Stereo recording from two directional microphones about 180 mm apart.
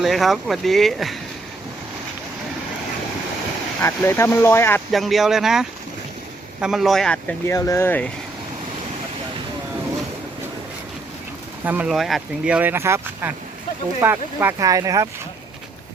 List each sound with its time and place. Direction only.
0.0 s speech: centre (ahead or behind)
3.8 s speech: 10° left (ahead or behind)
4.9 s speech: centre (ahead or behind)
11.6 s speech: 10° right (ahead or behind)